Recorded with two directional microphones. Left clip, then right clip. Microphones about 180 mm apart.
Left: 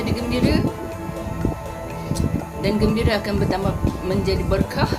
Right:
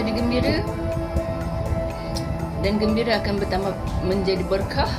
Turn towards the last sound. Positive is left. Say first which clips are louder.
# left 1 dB
turn(degrees=20)  # may be behind; listen again after turning